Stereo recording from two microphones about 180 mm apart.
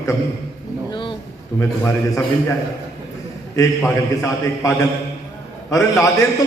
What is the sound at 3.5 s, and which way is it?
A man's voice, 15° left (ahead or behind).